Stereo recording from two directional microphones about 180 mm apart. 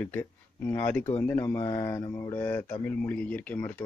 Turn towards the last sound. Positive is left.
turn(degrees=10)  # may be behind; listen again after turning